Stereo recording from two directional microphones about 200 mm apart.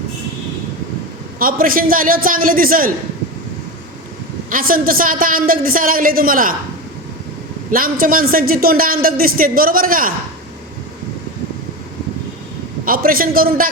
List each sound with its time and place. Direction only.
1.4 s a man's voice: 45° right (ahead or behind)
4.4 s a man's voice: 45° right (ahead or behind)
7.7 s a man's voice: 45° right (ahead or behind)
12.8 s a man's voice: 45° right (ahead or behind)